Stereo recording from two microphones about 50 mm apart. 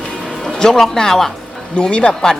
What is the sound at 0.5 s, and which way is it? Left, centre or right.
Speech, centre.